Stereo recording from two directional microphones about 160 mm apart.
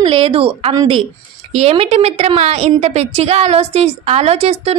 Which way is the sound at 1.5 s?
40° right (ahead or behind).